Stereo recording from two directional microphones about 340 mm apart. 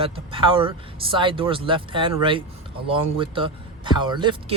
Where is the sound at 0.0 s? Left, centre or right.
Centre.